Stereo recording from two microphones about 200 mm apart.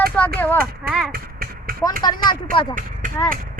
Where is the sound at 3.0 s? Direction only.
40° right (ahead or behind).